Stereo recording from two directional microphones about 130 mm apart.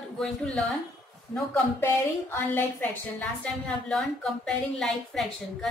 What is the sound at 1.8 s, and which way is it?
A woman's voice, 15° left (ahead or behind).